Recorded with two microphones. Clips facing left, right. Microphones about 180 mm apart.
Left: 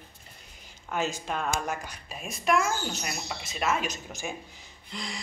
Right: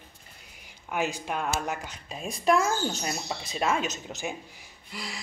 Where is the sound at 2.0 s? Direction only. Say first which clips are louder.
Right 3 dB; 30° right (ahead or behind).